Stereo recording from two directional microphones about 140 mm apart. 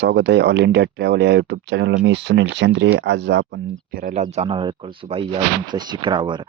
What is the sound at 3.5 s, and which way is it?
Speech, 85° right.